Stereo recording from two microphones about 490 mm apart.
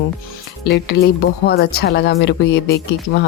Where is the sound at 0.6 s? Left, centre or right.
Centre.